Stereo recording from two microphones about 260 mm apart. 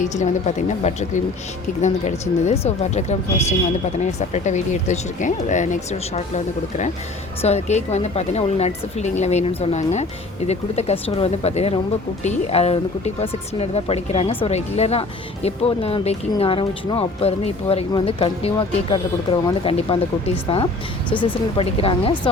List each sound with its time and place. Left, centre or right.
0.0 s speech: left